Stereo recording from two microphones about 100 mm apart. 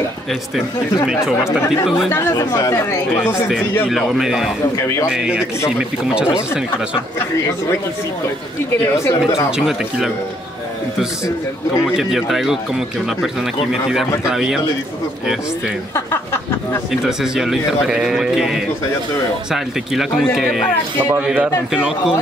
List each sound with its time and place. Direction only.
1.0 s speech: 5° right (ahead or behind)
2.0 s speech: 35° left (ahead or behind)
3.9 s speech: 5° right (ahead or behind)
4.7 s speech: 30° left (ahead or behind)
5.1 s a man's voice: 10° right (ahead or behind)
9.7 s speech: 5° right (ahead or behind)
11.8 s speech: centre (ahead or behind)
17.0 s speech: 5° right (ahead or behind)
21.0 s a man's voice: 15° right (ahead or behind)